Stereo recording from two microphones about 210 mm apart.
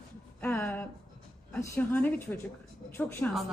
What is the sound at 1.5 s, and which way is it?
Speech, 10° left (ahead or behind).